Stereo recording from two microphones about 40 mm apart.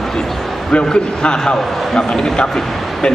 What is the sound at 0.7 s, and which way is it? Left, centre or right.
A man's voice, left.